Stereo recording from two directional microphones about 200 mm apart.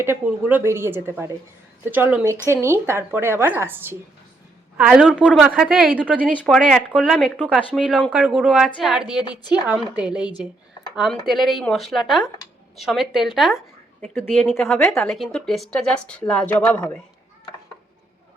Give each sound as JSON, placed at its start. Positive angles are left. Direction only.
{"t": 0.0, "sound": "a woman's voice", "side_deg": -10}
{"t": 6.2, "sound": "speech", "side_deg": 5}
{"t": 9.1, "sound": "a woman's voice", "side_deg": 20}
{"t": 9.6, "sound": "speech", "side_deg": -5}